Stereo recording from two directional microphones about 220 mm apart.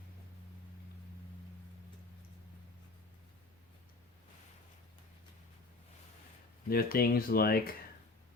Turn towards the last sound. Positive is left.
turn(degrees=45)  # may be behind; listen again after turning